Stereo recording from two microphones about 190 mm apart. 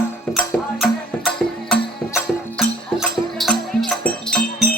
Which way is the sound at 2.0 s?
5° left (ahead or behind).